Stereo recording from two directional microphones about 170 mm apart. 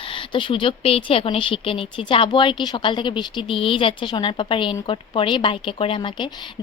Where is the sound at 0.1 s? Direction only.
30° left (ahead or behind).